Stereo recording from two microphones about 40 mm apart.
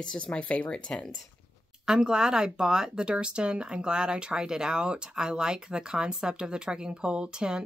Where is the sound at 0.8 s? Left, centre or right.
Left.